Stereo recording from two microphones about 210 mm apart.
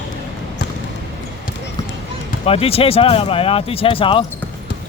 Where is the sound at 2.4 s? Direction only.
30° left (ahead or behind).